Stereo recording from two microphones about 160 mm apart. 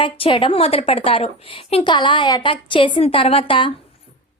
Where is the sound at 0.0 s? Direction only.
30° left (ahead or behind).